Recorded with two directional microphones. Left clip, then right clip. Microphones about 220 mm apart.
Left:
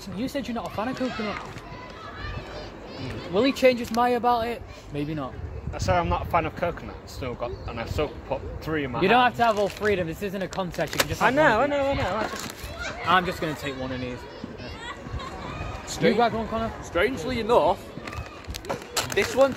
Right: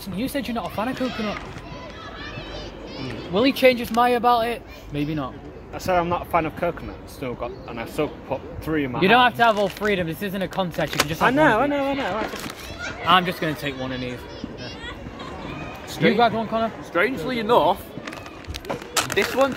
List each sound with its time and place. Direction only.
0.2 s speech: 25° right (ahead or behind)
3.0 s speech: 20° right (ahead or behind)
5.8 s speech: 15° left (ahead or behind)
9.0 s speech: 20° right (ahead or behind)
11.2 s speech: 20° left (ahead or behind)
13.0 s speech: 20° right (ahead or behind)
15.9 s speech: 10° right (ahead or behind)
16.9 s speech: 10° right (ahead or behind)
18.9 s speech: 15° right (ahead or behind)